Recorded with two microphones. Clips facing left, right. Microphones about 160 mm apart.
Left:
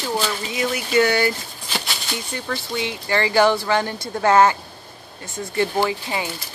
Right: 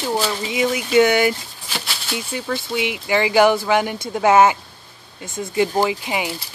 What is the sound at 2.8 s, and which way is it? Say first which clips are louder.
A woman's voice: right 2 dB; 15° right (ahead or behind).